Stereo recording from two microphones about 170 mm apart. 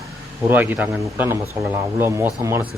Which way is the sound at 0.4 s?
10° right (ahead or behind).